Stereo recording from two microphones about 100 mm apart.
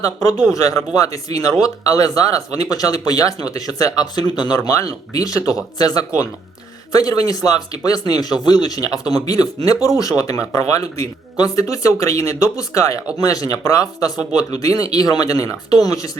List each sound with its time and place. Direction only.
0.5 s speech: 35° left (ahead or behind)